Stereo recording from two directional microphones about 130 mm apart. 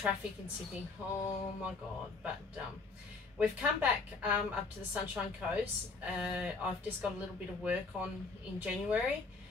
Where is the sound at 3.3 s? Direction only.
10° right (ahead or behind).